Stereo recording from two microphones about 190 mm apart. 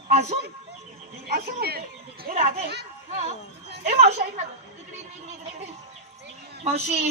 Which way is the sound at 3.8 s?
40° right (ahead or behind).